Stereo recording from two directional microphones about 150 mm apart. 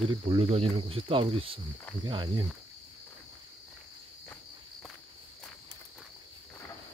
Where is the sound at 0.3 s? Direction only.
40° right (ahead or behind).